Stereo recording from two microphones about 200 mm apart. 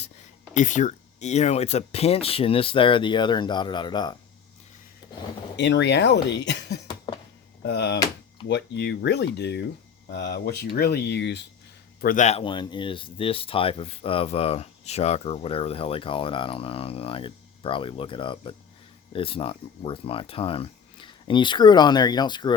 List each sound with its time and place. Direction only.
0.5 s speech: 40° left (ahead or behind); by 4.2 s 20° left (ahead or behind)
5.5 s speech: 60° left (ahead or behind)
6.8 s a sound: 25° left (ahead or behind)
7.6 s speech: 55° left (ahead or behind)
12.0 s speech: 40° left (ahead or behind); by 22.5 s 20° left (ahead or behind)